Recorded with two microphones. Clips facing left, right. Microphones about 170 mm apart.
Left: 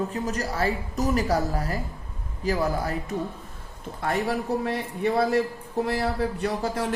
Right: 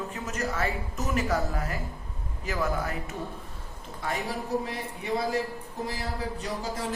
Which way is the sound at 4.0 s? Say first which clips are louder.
Left 6 dB; 60° left (ahead or behind).